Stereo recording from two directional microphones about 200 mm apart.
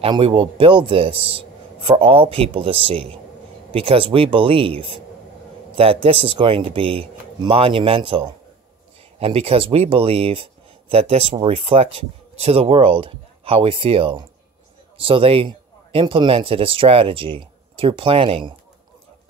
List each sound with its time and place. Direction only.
0.0 s a man's voice: 25° right (ahead or behind)